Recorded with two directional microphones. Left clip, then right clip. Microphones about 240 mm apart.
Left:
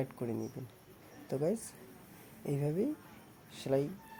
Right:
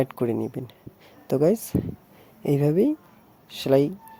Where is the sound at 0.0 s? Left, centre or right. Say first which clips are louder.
Right 14 dB; right.